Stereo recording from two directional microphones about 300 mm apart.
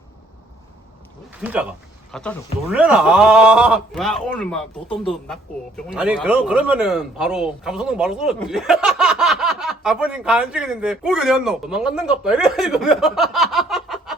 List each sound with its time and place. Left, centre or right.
1.4 s speech: centre